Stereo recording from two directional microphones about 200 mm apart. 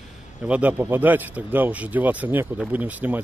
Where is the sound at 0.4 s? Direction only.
5° right (ahead or behind).